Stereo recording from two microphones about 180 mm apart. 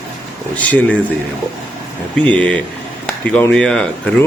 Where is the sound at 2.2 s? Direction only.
5° left (ahead or behind).